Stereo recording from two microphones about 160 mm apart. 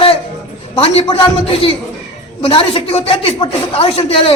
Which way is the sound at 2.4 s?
35° left (ahead or behind).